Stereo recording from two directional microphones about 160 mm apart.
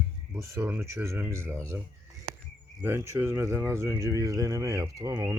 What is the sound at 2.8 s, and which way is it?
Speech, 15° right (ahead or behind).